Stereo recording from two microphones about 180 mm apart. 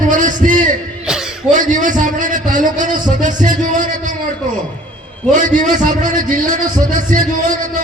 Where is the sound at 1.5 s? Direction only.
45° right (ahead or behind).